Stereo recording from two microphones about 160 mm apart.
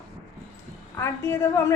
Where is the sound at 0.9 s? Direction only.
15° left (ahead or behind).